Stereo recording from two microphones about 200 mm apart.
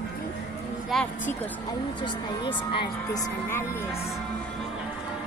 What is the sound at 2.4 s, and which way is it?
Speech, 25° left (ahead or behind).